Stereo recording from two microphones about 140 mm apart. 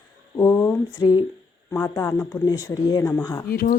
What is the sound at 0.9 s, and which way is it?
Speech, 35° left (ahead or behind).